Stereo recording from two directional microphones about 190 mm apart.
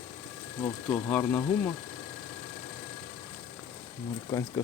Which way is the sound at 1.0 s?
10° left (ahead or behind).